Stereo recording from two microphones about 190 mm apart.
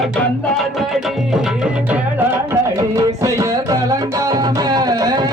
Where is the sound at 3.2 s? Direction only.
15° right (ahead or behind).